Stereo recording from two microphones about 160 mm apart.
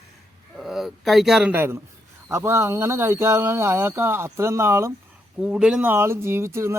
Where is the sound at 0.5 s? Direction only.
Centre (ahead or behind); by 4.9 s 15° right (ahead or behind).